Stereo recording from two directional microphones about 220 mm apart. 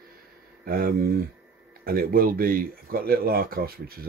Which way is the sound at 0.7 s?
40° right (ahead or behind).